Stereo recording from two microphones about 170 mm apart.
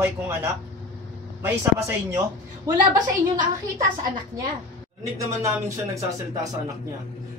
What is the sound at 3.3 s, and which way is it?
Speech, 50° right (ahead or behind).